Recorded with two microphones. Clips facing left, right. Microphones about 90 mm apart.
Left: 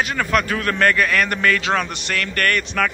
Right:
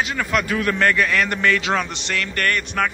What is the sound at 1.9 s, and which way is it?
Music, 20° right (ahead or behind).